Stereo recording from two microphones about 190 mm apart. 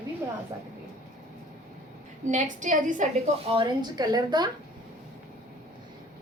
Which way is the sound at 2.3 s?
40° right (ahead or behind).